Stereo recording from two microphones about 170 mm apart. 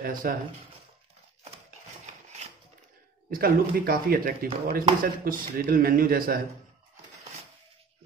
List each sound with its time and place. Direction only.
0.0 s speech: 55° right (ahead or behind)
3.3 s speech: 60° right (ahead or behind)